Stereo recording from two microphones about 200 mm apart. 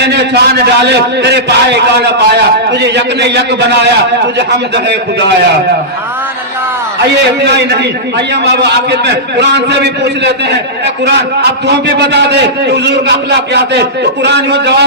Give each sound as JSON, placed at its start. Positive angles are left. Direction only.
{"t": 0.0, "sound": "a man's voice", "side_deg": -55}
{"t": 7.2, "sound": "a man's voice", "side_deg": -55}